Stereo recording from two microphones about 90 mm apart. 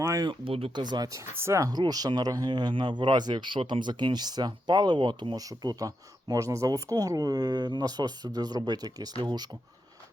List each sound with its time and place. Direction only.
0.4 s speech: 90° right
0.8 s speech: 50° right (ahead or behind)
1.2 s speech: 30° right (ahead or behind)
1.7 s speech: 45° right (ahead or behind)
5.4 s speech: 40° right (ahead or behind)